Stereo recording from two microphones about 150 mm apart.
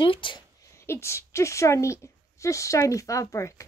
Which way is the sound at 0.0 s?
35° left (ahead or behind).